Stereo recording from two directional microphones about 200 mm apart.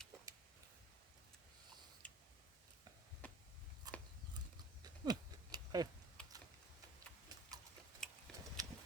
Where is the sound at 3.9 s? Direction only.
20° right (ahead or behind).